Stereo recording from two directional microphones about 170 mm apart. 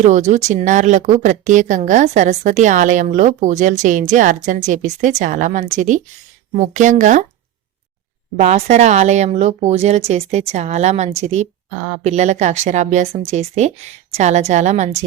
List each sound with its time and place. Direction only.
0.0 s a woman's voice: 45° right (ahead or behind)
8.4 s a woman's voice: 40° right (ahead or behind)